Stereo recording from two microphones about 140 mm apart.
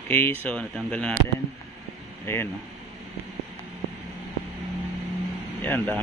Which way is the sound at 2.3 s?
15° left (ahead or behind).